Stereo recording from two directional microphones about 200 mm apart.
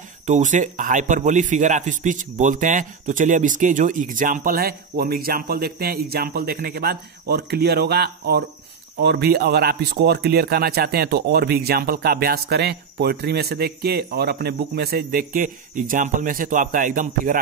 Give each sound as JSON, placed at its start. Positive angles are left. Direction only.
{"t": 0.3, "sound": "a man's voice", "side_deg": -40}